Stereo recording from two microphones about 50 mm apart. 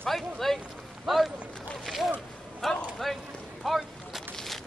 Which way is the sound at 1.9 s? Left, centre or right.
Centre.